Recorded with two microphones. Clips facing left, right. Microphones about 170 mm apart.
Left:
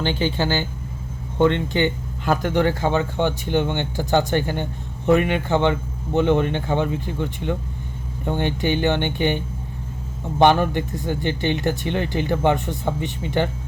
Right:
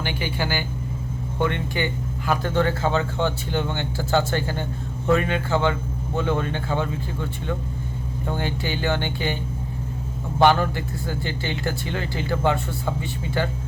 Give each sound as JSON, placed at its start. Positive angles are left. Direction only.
{"t": 0.2, "sound": "speech", "side_deg": 25}